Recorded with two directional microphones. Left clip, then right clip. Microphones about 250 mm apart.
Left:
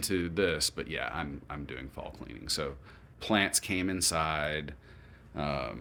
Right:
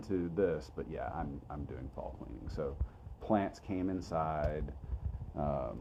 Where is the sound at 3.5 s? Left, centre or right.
Centre.